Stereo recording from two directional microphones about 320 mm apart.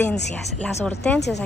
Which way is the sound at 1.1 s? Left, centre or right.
Left.